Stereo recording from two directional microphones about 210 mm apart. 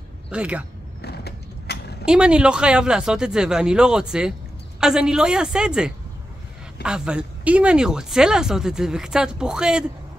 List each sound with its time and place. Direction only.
0.3 s speech: 5° right (ahead or behind)
1.0 s mechanisms: 50° left (ahead or behind)
2.0 s speech: 5° right (ahead or behind)